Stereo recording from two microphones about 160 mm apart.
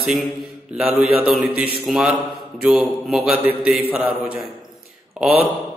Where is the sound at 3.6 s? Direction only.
10° right (ahead or behind).